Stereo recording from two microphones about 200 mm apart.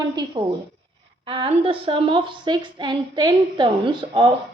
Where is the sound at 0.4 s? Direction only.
25° right (ahead or behind).